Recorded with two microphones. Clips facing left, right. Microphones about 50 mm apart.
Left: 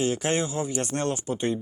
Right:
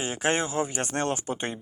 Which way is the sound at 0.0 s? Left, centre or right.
Right.